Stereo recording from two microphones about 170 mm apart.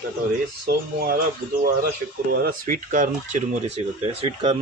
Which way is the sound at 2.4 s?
50° right (ahead or behind).